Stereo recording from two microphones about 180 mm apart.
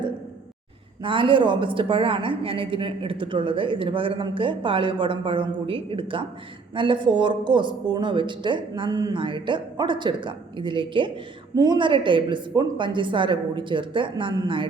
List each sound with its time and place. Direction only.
1.0 s a woman's voice: 25° right (ahead or behind)